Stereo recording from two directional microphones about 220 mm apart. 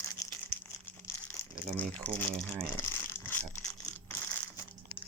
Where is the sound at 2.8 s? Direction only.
10° left (ahead or behind).